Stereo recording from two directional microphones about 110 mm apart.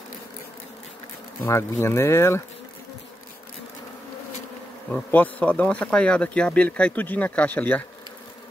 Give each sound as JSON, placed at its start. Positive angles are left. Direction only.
{"t": 1.4, "sound": "speech", "side_deg": 20}
{"t": 4.9, "sound": "speech", "side_deg": 15}